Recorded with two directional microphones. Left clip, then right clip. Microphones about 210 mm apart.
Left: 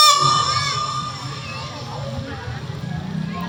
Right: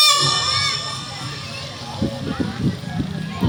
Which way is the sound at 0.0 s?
15° left (ahead or behind).